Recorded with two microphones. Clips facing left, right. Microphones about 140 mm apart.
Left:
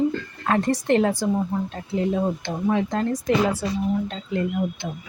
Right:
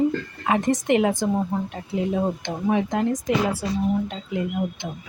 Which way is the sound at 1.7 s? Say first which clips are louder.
Left 1 dB; 5° right (ahead or behind).